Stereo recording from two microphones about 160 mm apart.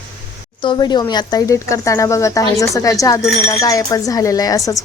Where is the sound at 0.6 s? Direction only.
30° left (ahead or behind).